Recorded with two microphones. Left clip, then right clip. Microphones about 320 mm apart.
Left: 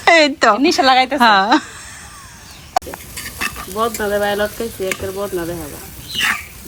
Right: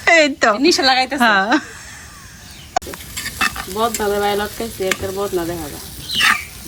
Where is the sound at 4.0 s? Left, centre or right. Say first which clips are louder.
Left 1 dB; centre.